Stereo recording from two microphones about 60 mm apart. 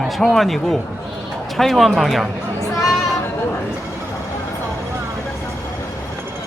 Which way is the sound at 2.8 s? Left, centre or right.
Centre.